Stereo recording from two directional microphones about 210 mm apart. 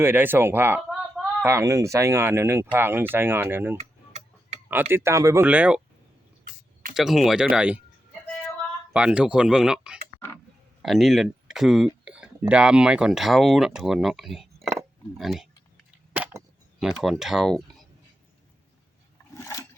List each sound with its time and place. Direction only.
0.0 s speech: 10° right (ahead or behind)
3.8 s tick-tock: 35° right (ahead or behind)
4.7 s speech: 10° right (ahead or behind)
6.9 s speech: centre (ahead or behind)
8.9 s speech: 5° right (ahead or behind)
16.1 s a sound: 5° right (ahead or behind)
16.8 s speech: centre (ahead or behind)
19.3 s a sound: 15° left (ahead or behind)